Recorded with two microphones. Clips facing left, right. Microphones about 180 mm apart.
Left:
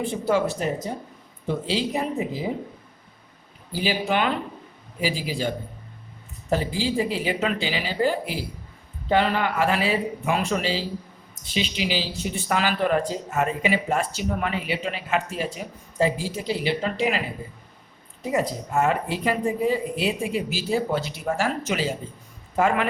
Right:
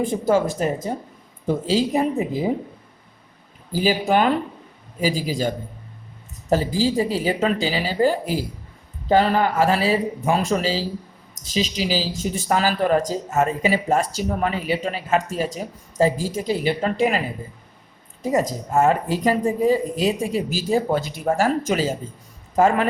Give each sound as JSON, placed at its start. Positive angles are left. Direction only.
{"t": 0.0, "sound": "speech", "side_deg": -45}
{"t": 3.7, "sound": "speech", "side_deg": -40}
{"t": 6.5, "sound": "speech", "side_deg": -40}
{"t": 18.2, "sound": "speech", "side_deg": -40}